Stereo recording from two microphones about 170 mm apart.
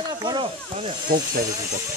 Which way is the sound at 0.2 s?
25° right (ahead or behind).